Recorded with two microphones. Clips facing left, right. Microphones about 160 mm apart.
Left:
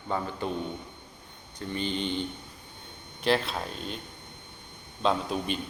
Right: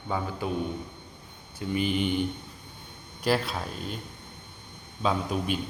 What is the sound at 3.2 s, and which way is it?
Speech, 5° right (ahead or behind).